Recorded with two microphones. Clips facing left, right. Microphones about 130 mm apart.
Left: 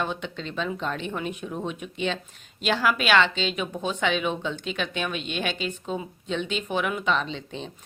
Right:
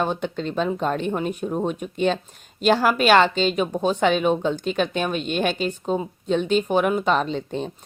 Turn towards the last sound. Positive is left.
turn(degrees=-45)  # may be behind; listen again after turning